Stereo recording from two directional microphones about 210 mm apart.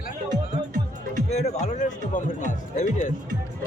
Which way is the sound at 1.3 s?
30° left (ahead or behind).